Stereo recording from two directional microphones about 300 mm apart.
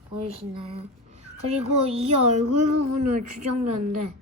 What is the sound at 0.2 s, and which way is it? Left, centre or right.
A child's voice, centre.